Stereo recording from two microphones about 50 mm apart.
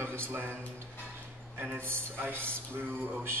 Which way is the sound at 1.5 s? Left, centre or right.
Right.